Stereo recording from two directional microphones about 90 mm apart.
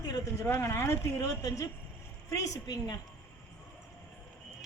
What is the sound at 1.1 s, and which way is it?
A woman's voice, 40° left (ahead or behind).